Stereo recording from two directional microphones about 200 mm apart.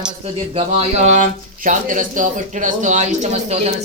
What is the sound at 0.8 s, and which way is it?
Speech, 35° right (ahead or behind).